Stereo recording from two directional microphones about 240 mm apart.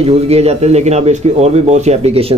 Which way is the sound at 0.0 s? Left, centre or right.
Right.